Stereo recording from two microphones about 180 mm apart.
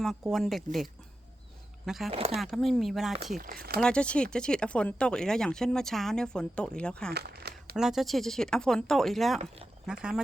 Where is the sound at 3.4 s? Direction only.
55° right (ahead or behind).